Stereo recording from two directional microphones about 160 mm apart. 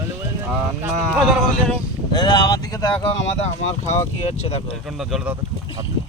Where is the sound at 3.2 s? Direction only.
40° left (ahead or behind).